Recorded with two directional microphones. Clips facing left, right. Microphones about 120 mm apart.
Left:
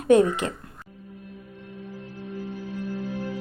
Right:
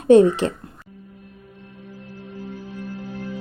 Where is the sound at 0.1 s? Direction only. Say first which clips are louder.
Right 5 dB; 30° right (ahead or behind).